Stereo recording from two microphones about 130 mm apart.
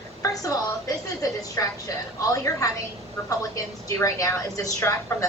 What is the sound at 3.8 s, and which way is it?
Speech, 25° left (ahead or behind).